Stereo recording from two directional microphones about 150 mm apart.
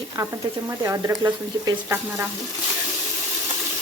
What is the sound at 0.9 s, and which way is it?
Speech, 20° right (ahead or behind).